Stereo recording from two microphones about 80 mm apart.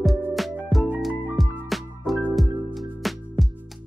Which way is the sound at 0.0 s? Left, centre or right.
Centre.